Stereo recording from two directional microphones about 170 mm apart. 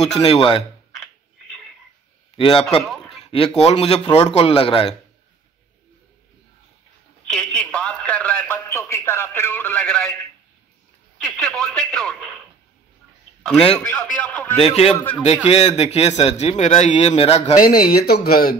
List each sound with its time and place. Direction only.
0.2 s speech: 30° left (ahead or behind)
2.3 s speech: 30° left (ahead or behind)
2.8 s a sound: centre (ahead or behind)
3.3 s speech: 35° left (ahead or behind)
7.2 s a sound: 5° left (ahead or behind)
11.2 s a sound: 5° left (ahead or behind)
13.7 s a man's voice: 10° left (ahead or behind)
14.6 s speech: 35° left (ahead or behind)
15.0 s a man's voice: 10° left (ahead or behind)
15.2 s speech: 40° left (ahead or behind)
17.6 s speech: 60° left (ahead or behind)